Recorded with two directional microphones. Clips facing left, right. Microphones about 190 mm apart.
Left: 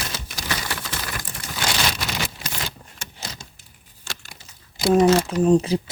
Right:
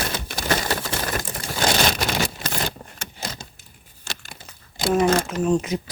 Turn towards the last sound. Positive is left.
turn(degrees=30)  # may be behind; listen again after turning